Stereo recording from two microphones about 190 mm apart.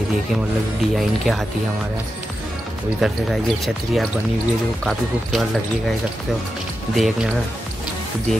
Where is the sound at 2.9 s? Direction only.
Centre (ahead or behind).